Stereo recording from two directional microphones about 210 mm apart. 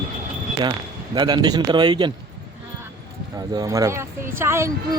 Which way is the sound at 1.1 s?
20° right (ahead or behind).